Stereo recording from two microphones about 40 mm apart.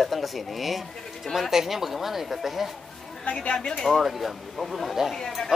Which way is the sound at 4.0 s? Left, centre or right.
Centre.